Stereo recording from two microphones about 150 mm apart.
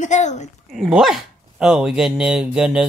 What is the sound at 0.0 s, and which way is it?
Speech, 50° left (ahead or behind).